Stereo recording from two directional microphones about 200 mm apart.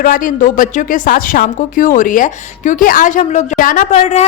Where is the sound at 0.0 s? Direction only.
40° left (ahead or behind).